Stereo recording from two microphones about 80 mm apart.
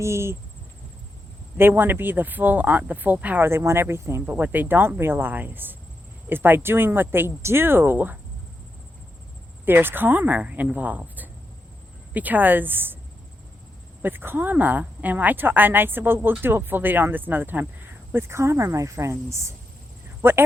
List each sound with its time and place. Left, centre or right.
0.0 s cricket: right
1.5 s speech: right
4.4 s speech: right
9.6 s speech: right
14.0 s speech: right
20.2 s cricket: right